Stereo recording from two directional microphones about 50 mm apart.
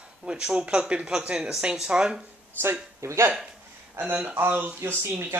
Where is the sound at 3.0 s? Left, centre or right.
Right.